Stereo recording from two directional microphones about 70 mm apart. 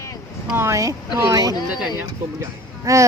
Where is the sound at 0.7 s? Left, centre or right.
Right.